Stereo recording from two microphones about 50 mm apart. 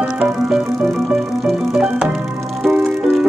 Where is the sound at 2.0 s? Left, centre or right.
Centre.